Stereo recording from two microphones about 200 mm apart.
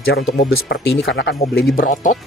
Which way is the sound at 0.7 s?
65° left (ahead or behind).